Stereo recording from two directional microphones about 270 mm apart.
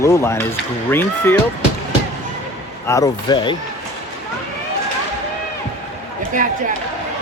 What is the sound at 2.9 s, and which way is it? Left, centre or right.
Speech, centre.